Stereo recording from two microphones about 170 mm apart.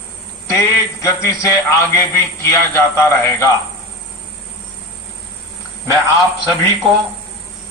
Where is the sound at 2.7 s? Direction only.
15° left (ahead or behind).